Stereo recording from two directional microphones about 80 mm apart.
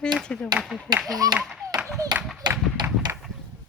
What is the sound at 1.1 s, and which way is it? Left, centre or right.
Speech, right.